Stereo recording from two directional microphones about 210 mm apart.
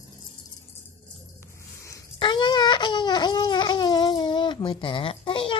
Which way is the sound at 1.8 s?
15° left (ahead or behind).